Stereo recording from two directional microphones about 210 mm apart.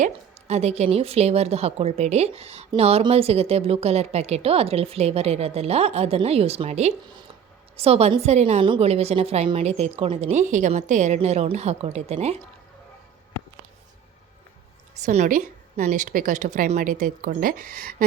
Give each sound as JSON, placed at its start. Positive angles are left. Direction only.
{"t": 0.0, "sound": "a woman's voice", "side_deg": -30}
{"t": 15.0, "sound": "a woman's voice", "side_deg": -35}